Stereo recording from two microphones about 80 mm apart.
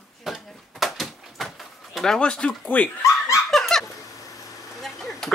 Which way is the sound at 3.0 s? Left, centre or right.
Left.